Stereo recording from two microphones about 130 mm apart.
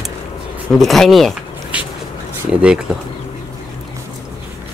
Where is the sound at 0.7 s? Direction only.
Centre (ahead or behind).